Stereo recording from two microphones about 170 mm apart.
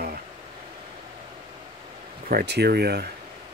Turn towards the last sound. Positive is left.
turn(degrees=-70)  # may be behind; listen again after turning